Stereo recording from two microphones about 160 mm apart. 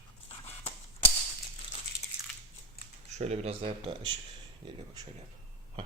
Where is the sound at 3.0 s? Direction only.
45° right (ahead or behind).